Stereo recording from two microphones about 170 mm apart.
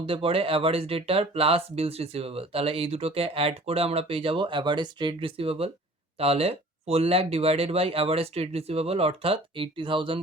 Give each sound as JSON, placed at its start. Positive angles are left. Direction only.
{"t": 0.0, "sound": "speech", "side_deg": -35}